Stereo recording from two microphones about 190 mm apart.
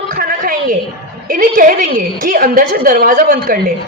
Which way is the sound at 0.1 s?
50° right (ahead or behind).